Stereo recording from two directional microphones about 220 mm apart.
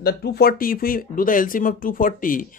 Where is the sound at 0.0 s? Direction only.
45° left (ahead or behind).